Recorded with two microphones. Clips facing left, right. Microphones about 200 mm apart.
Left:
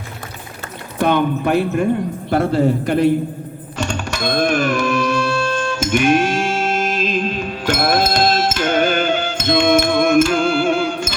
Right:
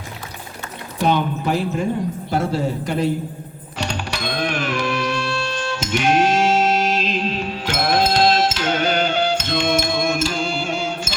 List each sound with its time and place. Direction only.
0.9 s speech: 55° left (ahead or behind)
3.8 s music: 45° left (ahead or behind)